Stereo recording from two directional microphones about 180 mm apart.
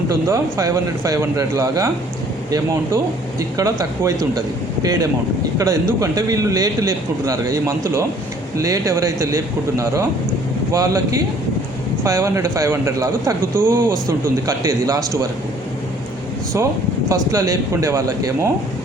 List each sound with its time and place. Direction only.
0.1 s a man's voice: 15° right (ahead or behind)
17.1 s speech: 20° right (ahead or behind)